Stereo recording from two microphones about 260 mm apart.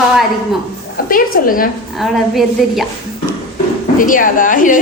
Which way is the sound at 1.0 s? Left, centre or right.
Left.